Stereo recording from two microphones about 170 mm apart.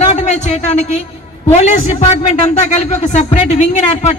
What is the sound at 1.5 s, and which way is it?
A woman's voice, 40° left (ahead or behind).